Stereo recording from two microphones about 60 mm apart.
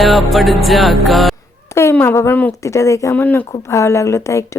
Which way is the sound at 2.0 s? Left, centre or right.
Left.